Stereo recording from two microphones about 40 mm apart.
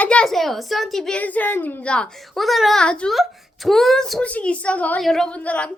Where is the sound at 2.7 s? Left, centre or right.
Left.